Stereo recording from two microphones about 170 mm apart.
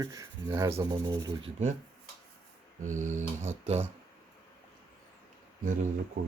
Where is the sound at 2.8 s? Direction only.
45° right (ahead or behind).